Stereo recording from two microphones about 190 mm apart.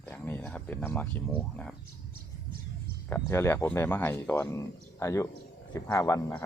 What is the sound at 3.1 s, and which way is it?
Speech, 15° left (ahead or behind).